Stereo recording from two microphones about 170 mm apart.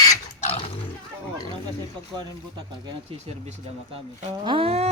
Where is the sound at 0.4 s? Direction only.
35° left (ahead or behind).